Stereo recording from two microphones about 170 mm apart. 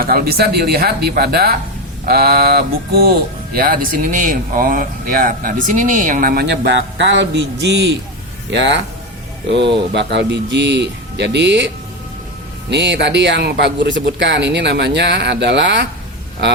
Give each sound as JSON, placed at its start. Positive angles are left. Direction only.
{"t": 0.0, "sound": "speech", "side_deg": -60}
{"t": 9.9, "sound": "speech", "side_deg": -90}
{"t": 12.7, "sound": "speech", "side_deg": -90}